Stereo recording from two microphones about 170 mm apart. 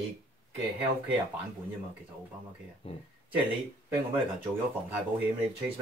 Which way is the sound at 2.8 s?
35° left (ahead or behind).